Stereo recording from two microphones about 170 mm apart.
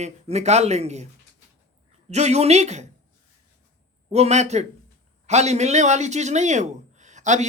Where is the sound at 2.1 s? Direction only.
40° right (ahead or behind).